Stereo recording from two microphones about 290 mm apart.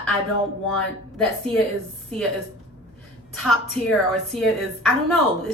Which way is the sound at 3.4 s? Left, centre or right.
Centre.